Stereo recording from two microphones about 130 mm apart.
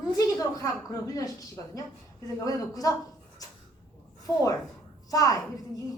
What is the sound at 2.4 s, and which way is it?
Speech, 30° left (ahead or behind).